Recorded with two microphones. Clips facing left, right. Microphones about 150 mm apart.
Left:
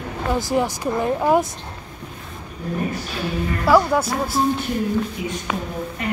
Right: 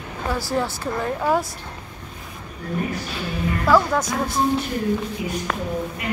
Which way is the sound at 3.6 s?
10° left (ahead or behind).